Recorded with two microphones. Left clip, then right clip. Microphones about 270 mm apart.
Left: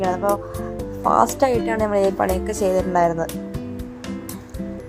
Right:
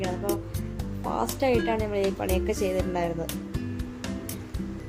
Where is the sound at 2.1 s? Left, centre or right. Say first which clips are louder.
Left 6 dB; left.